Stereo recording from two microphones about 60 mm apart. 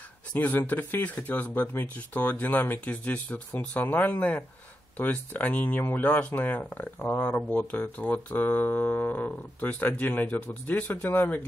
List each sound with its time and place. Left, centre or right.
0.3 s speech: left